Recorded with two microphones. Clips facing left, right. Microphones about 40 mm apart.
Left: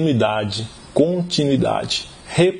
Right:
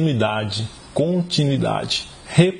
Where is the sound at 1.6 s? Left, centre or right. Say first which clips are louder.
Left 2 dB; centre.